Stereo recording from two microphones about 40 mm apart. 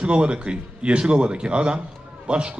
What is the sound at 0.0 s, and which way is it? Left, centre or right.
A man's voice, right.